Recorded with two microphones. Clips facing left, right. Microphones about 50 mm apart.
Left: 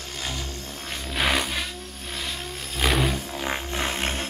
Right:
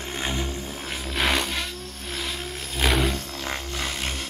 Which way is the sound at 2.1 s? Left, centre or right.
Centre.